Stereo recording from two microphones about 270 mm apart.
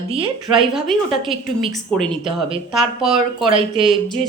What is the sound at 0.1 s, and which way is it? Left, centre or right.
Speech, centre.